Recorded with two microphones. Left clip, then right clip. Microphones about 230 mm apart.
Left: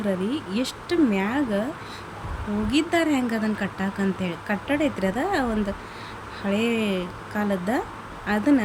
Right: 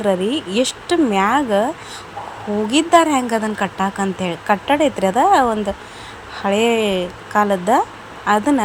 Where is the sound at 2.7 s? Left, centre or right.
Centre.